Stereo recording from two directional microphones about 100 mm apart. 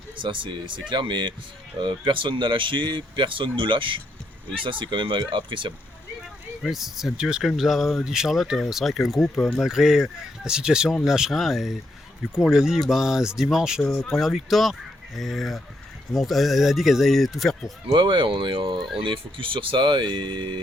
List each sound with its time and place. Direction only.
0.2 s speech: 55° right (ahead or behind)
6.6 s speech: 5° right (ahead or behind)
17.9 s speech: 55° right (ahead or behind)